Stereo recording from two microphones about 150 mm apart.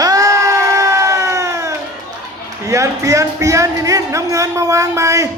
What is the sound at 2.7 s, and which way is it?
Speech, 20° right (ahead or behind).